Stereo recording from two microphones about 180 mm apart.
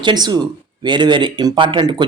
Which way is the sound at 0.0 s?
25° right (ahead or behind).